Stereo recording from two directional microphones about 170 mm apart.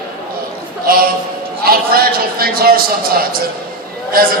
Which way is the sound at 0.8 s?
60° right (ahead or behind).